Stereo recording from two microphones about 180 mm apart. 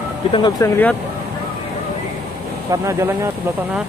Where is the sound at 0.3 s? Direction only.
25° left (ahead or behind).